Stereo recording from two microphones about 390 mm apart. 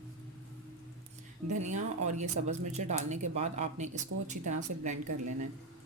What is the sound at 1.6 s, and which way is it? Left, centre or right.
Speech, centre.